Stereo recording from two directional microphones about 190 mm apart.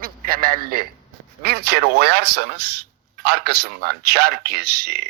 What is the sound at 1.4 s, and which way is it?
A man's voice, 60° right (ahead or behind).